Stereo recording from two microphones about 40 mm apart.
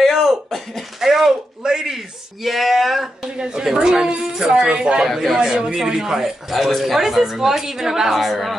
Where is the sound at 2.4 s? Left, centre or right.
Centre.